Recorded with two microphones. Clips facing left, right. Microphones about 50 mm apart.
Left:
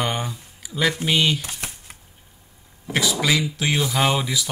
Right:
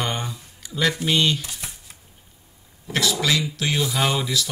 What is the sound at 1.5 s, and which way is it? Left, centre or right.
Shuffling cards, left.